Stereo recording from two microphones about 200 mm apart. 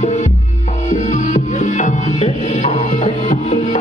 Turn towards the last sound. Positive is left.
turn(degrees=35)  # may be behind; listen again after turning